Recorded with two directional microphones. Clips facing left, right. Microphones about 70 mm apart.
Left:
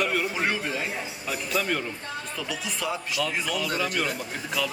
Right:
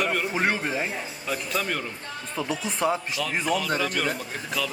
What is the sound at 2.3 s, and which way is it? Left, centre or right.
Speech, right.